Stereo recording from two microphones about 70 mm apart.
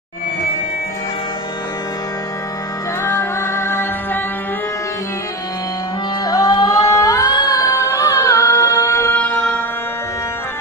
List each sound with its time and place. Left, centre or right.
3.0 s music: left
6.2 s music: left
6.9 s music: left
9.1 s music: left